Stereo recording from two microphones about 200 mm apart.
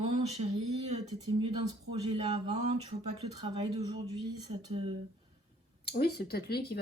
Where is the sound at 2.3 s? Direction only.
30° right (ahead or behind).